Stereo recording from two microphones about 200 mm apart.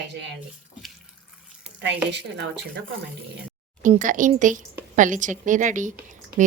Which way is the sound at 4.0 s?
40° right (ahead or behind).